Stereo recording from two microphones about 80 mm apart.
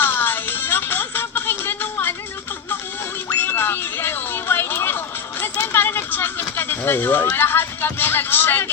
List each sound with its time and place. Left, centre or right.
0.0 s music: left
3.2 s music: left
5.7 s a sound: left
6.6 s speech: left